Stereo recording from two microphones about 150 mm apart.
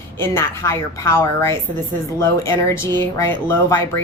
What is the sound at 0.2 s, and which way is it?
A woman's voice, 15° left (ahead or behind).